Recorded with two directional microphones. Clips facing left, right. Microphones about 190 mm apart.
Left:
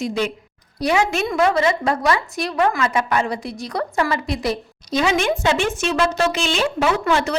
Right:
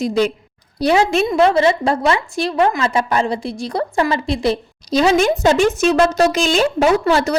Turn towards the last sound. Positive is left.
turn(degrees=-40)  # may be behind; listen again after turning